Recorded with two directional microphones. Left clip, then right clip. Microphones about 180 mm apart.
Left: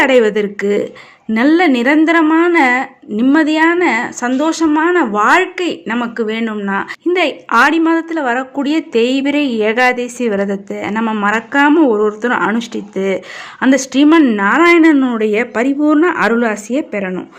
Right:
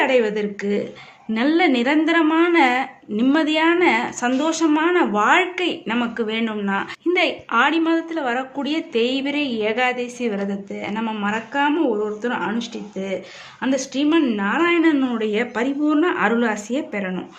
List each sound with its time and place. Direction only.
0.0 s a woman's voice: 50° left (ahead or behind); by 17.2 s 30° left (ahead or behind)